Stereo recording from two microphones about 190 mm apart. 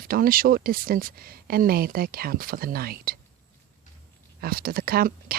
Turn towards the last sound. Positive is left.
turn(degrees=-50)  # may be behind; listen again after turning